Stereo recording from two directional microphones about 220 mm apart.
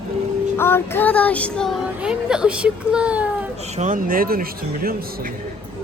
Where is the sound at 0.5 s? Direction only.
10° left (ahead or behind).